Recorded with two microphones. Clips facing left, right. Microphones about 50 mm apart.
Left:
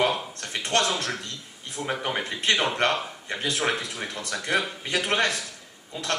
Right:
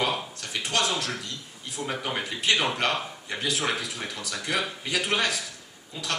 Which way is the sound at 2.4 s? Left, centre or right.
Left.